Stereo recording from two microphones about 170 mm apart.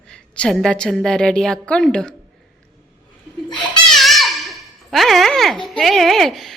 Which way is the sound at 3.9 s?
Centre (ahead or behind).